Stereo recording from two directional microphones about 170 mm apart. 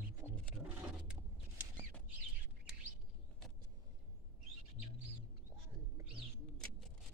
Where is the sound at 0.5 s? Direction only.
5° right (ahead or behind).